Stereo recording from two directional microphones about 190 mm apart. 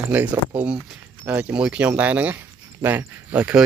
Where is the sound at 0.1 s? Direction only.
10° right (ahead or behind).